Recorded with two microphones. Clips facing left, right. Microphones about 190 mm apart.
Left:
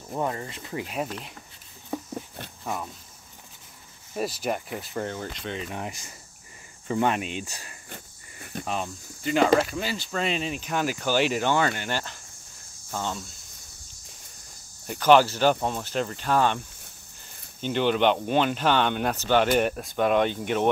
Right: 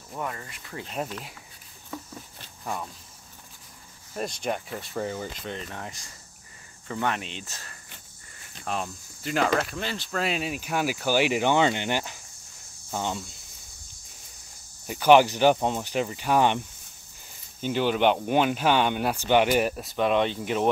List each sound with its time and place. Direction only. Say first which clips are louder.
0.1 s speech: left 5 dB; 30° left (ahead or behind)
2.6 s speech: left 1 dB; 5° left (ahead or behind)
4.1 s speech: left 2 dB; 5° left (ahead or behind)
5.7 s speech: left 4 dB; 20° left (ahead or behind)
8.6 s cricket: right 1 dB; centre (ahead or behind)
9.6 s speech: left 3 dB; 5° left (ahead or behind); by 13.2 s 15° right (ahead or behind)
14.9 s speech: right 1 dB; 10° right (ahead or behind)